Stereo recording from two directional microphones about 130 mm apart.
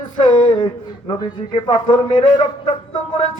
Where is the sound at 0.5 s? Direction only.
40° left (ahead or behind).